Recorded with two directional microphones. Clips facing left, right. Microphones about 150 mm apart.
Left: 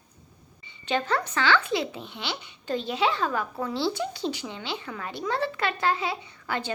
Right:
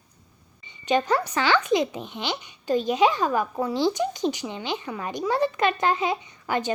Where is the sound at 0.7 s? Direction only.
15° right (ahead or behind).